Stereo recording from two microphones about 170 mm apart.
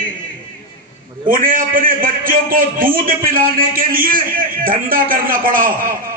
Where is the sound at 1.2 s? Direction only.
55° right (ahead or behind).